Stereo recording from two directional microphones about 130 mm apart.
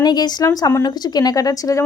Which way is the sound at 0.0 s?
30° left (ahead or behind).